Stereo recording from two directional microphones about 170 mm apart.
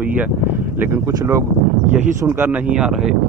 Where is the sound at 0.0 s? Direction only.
10° right (ahead or behind).